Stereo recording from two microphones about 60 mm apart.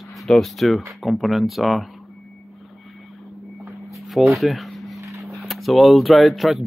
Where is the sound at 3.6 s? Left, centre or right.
Centre.